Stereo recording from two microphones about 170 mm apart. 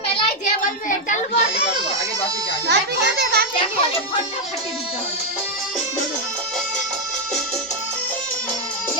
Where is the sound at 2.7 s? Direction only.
70° right (ahead or behind).